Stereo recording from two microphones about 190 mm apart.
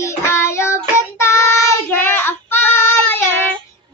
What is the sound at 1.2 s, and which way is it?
Child singing, 15° left (ahead or behind).